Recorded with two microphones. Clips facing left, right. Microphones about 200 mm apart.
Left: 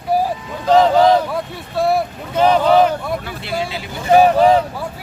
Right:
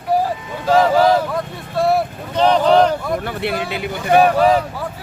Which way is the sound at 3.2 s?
60° right (ahead or behind).